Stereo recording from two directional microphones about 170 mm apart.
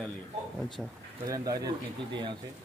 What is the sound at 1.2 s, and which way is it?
Speech, 20° right (ahead or behind).